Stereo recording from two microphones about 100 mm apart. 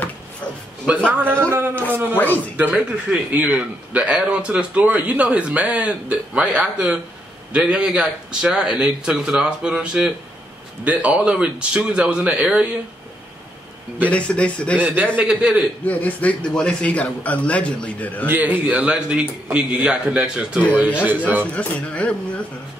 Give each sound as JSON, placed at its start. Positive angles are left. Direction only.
{"t": 0.9, "sound": "a man's voice", "side_deg": -10}
{"t": 1.2, "sound": "speech", "side_deg": -25}
{"t": 2.1, "sound": "a man's voice", "side_deg": 15}
{"t": 2.5, "sound": "a man's voice", "side_deg": -10}
{"t": 14.0, "sound": "a man's voice", "side_deg": 10}
{"t": 14.8, "sound": "a man's voice", "side_deg": -15}
{"t": 15.8, "sound": "a man's voice", "side_deg": 15}
{"t": 18.2, "sound": "a man's voice", "side_deg": -15}
{"t": 21.5, "sound": "a man's voice", "side_deg": 10}